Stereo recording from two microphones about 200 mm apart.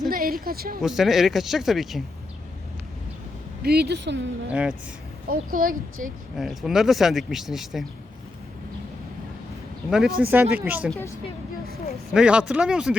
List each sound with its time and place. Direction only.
0.1 s speech: 45° right (ahead or behind)
0.8 s speech: centre (ahead or behind)
3.6 s speech: 50° right (ahead or behind)
5.3 s speech: 45° right (ahead or behind)
6.3 s speech: centre (ahead or behind)
9.9 s speech: centre (ahead or behind)
12.1 s speech: 5° right (ahead or behind)